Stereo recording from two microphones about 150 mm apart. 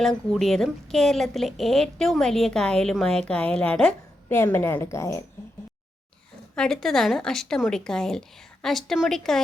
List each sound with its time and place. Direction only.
0.0 s a woman's voice: centre (ahead or behind); by 5.2 s 20° left (ahead or behind)
6.6 s a woman's voice: 5° left (ahead or behind)